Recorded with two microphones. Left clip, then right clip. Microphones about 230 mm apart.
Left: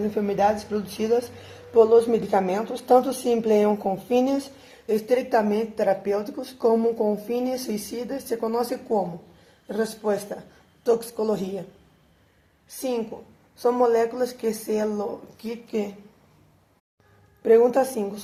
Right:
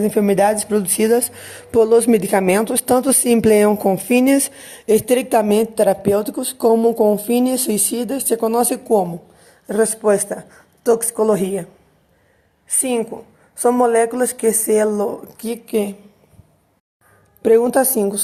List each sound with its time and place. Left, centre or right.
0.2 s a woman's voice: right
13.6 s speech: right
17.4 s speech: right